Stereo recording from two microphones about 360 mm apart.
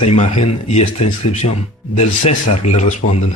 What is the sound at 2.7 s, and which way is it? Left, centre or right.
Speech, centre.